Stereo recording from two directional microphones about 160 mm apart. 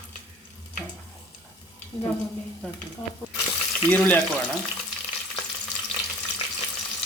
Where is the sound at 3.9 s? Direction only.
10° left (ahead or behind).